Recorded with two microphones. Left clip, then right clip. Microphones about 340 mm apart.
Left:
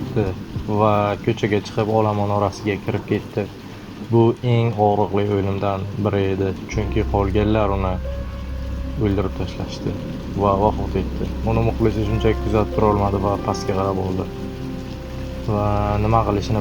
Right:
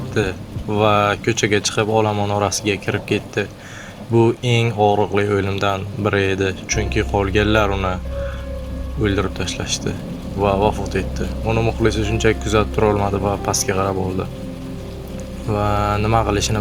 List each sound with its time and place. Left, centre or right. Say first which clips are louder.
0.7 s speech: right 2 dB; right
10.4 s speech: right 1 dB; right
15.5 s speech: right 2 dB; right